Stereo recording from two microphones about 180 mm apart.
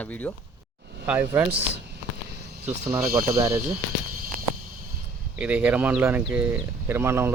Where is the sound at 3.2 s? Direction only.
15° right (ahead or behind).